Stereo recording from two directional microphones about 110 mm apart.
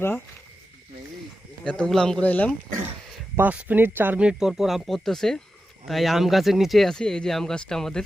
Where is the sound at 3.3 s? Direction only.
15° right (ahead or behind); by 8.0 s 5° left (ahead or behind).